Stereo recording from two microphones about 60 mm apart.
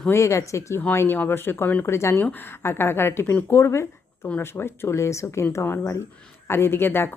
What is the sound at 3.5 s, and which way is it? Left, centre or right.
Speech, left.